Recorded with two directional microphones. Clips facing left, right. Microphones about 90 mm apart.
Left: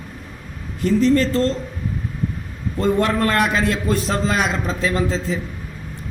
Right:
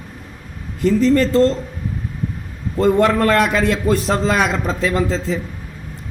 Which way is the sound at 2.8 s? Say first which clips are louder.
Right 4 dB; 80° right.